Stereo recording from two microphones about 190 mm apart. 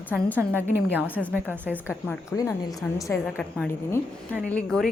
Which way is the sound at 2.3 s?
15° left (ahead or behind).